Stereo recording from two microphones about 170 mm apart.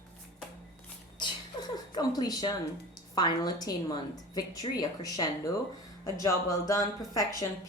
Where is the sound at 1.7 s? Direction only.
25° left (ahead or behind).